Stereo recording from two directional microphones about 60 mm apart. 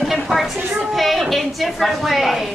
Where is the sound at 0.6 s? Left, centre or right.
Right.